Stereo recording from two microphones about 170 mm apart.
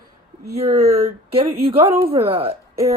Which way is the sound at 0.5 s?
40° right (ahead or behind).